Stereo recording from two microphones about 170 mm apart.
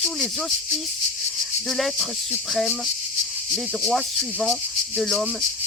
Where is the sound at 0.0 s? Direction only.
Centre (ahead or behind).